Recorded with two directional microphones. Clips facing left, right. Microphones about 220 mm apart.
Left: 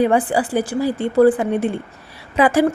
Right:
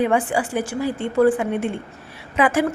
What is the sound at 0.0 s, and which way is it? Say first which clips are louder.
A woman's voice: left 3 dB; 35° left (ahead or behind).